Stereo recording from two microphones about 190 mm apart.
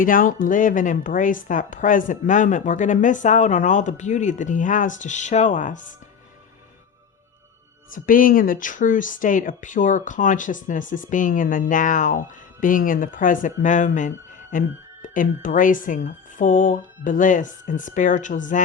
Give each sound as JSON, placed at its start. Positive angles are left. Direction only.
{"t": 0.0, "sound": "a woman's voice", "side_deg": 45}
{"t": 7.9, "sound": "speech", "side_deg": 45}